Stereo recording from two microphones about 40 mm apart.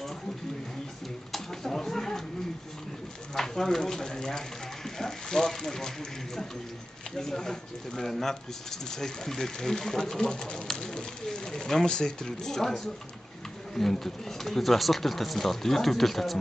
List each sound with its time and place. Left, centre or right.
1.3 s a sound: centre
3.3 s speech: centre
10.7 s bird: centre
11.2 s speech: centre